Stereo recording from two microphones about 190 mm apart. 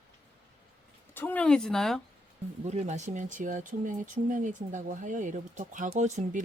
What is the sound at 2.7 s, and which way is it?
Speech, 35° right (ahead or behind).